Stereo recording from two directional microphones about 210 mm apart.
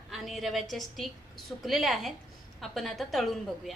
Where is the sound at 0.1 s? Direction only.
Centre (ahead or behind).